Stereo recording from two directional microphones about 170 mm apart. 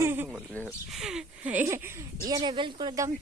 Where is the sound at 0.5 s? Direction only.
5° left (ahead or behind); by 3.1 s 20° right (ahead or behind).